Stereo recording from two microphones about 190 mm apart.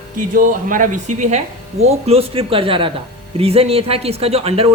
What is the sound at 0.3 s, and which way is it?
Speech, 45° right (ahead or behind).